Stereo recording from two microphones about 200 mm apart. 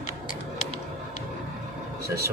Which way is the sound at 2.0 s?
50° right (ahead or behind).